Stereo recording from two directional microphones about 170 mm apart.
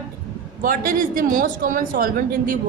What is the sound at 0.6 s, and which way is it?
A woman's voice, 55° right (ahead or behind).